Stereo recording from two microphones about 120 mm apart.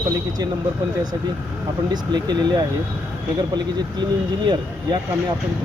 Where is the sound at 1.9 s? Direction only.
35° right (ahead or behind).